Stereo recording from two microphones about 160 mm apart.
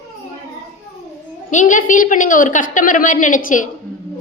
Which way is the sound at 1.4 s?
55° left (ahead or behind).